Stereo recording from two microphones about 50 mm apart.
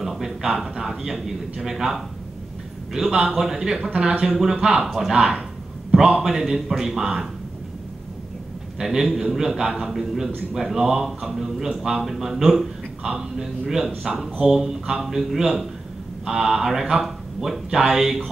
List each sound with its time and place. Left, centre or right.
0.0 s speech: centre
3.9 s speech: right
4.4 s speech: centre
4.8 s speech: centre
5.1 s a man's voice: centre
6.3 s speech: centre
8.7 s speech: centre